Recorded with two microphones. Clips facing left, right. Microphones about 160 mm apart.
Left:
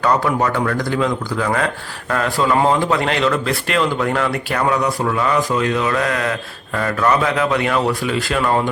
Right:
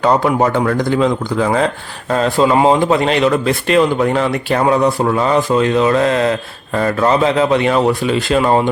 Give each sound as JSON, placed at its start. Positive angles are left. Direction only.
{"t": 0.0, "sound": "speech", "side_deg": -25}